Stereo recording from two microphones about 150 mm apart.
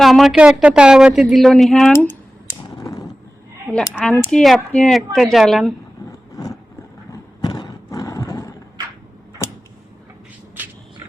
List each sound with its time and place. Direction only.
0.0 s speech: centre (ahead or behind)
2.6 s a sound: 25° left (ahead or behind)
3.7 s speech: centre (ahead or behind)
6.1 s vehicle: 20° left (ahead or behind)
7.1 s horse: 30° left (ahead or behind)